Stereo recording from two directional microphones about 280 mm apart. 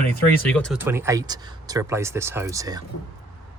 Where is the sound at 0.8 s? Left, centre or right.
Centre.